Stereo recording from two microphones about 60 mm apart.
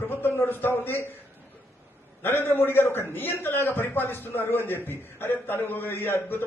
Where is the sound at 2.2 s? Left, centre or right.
Left.